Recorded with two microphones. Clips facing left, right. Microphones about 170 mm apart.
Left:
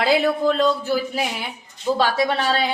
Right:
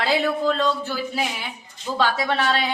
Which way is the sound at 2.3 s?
35° left (ahead or behind).